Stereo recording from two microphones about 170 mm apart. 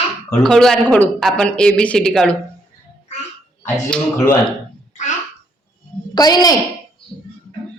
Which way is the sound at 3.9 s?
5° left (ahead or behind).